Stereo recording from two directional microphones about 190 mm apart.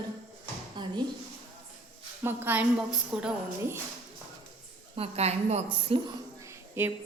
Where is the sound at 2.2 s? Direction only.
10° right (ahead or behind).